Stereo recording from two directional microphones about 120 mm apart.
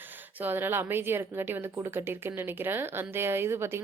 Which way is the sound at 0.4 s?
20° right (ahead or behind).